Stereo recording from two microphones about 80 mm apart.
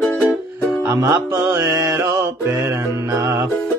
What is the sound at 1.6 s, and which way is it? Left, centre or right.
Mantra, right.